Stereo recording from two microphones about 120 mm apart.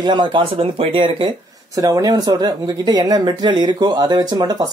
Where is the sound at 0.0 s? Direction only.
40° right (ahead or behind).